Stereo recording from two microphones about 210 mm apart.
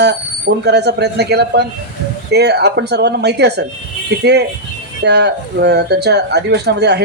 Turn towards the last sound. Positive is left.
turn(degrees=-55)  # may be behind; listen again after turning